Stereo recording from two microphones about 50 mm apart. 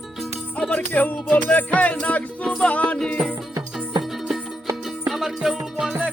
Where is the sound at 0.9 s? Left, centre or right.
Left.